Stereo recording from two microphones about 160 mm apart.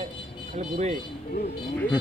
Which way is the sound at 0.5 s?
45° right (ahead or behind).